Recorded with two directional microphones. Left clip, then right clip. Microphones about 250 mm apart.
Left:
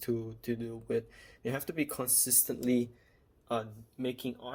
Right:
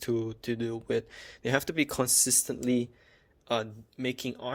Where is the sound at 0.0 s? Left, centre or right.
Right.